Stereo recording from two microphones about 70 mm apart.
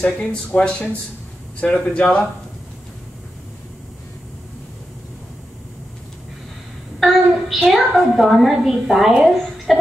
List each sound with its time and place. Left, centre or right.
0.0 s speech: centre
7.0 s a child's voice: centre